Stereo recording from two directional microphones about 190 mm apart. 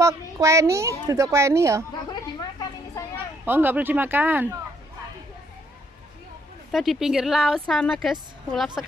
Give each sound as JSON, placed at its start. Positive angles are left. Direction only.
{"t": 0.0, "sound": "a child's voice", "side_deg": -15}
{"t": 2.6, "sound": "children playing", "side_deg": 20}
{"t": 3.4, "sound": "a child's voice", "side_deg": -10}
{"t": 6.7, "sound": "speech", "side_deg": 0}